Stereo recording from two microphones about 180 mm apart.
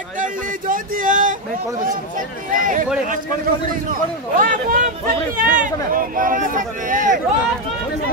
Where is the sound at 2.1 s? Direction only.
50° right (ahead or behind).